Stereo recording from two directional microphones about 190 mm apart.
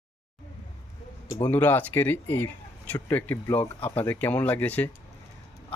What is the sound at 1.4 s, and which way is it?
Speech, 10° left (ahead or behind).